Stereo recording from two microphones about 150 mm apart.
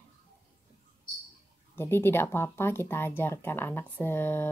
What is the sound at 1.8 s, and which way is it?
Speech, 15° left (ahead or behind).